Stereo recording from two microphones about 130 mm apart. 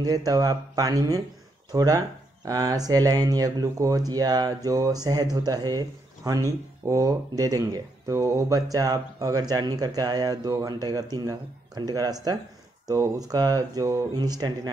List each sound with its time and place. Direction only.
0.0 s speech: 30° right (ahead or behind)